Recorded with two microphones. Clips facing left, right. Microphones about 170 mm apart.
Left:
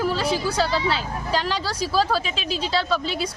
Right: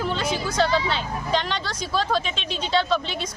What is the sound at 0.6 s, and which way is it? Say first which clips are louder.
A woman's voice: right 1 dB; 5° left (ahead or behind).